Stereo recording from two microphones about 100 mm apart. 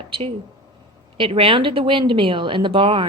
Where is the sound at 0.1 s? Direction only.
70° right (ahead or behind).